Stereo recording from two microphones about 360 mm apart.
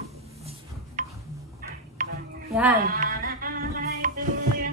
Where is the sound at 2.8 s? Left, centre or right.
Right.